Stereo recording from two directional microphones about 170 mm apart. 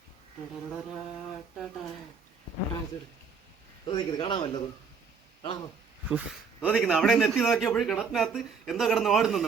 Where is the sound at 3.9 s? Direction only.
25° left (ahead or behind).